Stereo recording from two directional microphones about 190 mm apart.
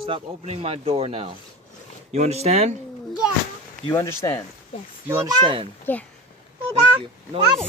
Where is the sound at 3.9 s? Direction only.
15° left (ahead or behind).